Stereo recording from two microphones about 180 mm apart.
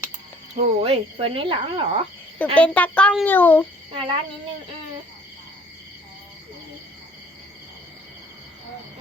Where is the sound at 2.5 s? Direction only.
10° left (ahead or behind).